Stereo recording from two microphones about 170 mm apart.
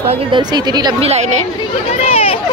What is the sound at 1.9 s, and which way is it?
Speech, 35° left (ahead or behind).